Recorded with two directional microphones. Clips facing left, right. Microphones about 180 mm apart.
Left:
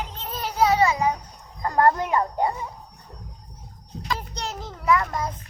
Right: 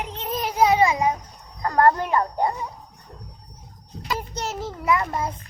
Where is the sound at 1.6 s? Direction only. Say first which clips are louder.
Right 1 dB; 15° left (ahead or behind).